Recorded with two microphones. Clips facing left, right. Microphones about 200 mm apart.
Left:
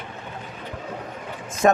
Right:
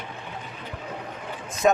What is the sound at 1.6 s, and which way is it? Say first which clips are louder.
Speech: left 2 dB; 55° left (ahead or behind).